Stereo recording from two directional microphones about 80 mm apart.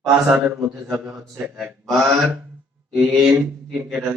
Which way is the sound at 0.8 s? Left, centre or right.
Centre.